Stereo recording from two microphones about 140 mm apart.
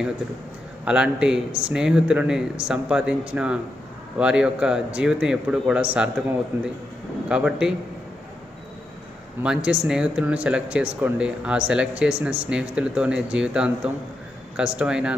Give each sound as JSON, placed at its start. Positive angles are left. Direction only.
{"t": 0.8, "sound": "speech", "side_deg": -10}
{"t": 9.4, "sound": "speech", "side_deg": -5}